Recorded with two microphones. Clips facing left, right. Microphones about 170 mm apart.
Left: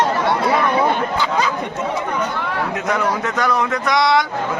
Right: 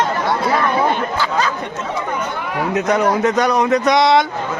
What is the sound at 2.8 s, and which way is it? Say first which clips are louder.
Speech: right 6 dB; 20° right (ahead or behind).